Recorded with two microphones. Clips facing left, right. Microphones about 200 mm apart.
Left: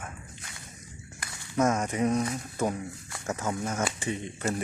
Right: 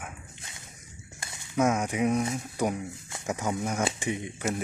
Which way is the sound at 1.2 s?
25° right (ahead or behind).